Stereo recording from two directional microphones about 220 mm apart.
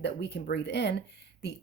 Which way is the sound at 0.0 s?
50° left (ahead or behind).